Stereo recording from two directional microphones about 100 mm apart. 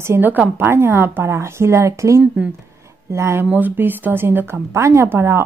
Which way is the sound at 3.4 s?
20° right (ahead or behind).